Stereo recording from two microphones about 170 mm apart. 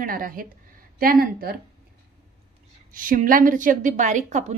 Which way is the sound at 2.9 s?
55° right (ahead or behind).